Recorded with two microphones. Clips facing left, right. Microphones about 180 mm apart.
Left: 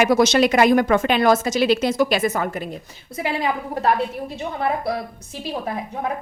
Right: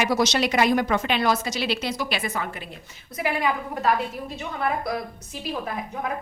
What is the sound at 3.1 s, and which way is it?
Speech, 25° left (ahead or behind).